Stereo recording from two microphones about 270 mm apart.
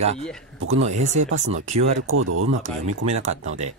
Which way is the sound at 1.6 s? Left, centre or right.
Right.